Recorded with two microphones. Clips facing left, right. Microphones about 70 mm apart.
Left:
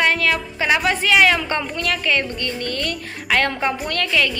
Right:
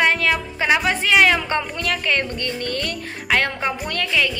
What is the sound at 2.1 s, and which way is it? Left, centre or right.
Music, right.